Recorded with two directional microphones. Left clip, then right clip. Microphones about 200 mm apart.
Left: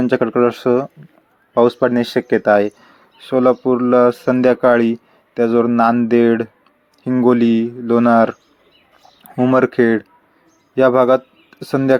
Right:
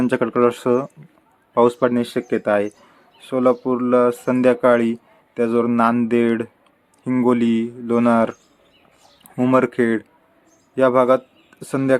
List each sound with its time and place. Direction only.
0.0 s a man's voice: 10° left (ahead or behind)